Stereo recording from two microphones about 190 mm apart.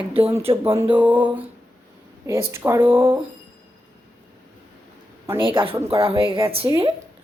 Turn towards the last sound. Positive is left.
turn(degrees=-25)  # may be behind; listen again after turning